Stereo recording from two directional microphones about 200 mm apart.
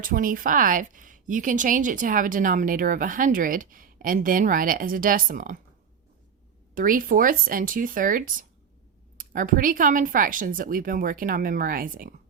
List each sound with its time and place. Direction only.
0.0 s a woman's voice: 45° right (ahead or behind)
6.7 s a woman's voice: 45° right (ahead or behind)